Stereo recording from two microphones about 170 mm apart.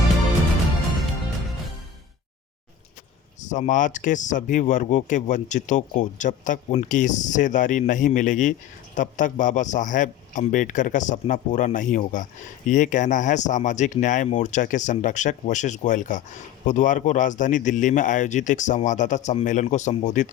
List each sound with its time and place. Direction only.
3.4 s speech: 45° left (ahead or behind)